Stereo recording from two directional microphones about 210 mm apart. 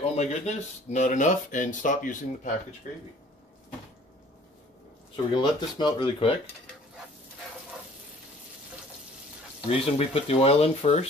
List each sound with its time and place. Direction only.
0.0 s speech: 30° left (ahead or behind)
5.1 s speech: 20° left (ahead or behind)
9.7 s speech: 30° left (ahead or behind)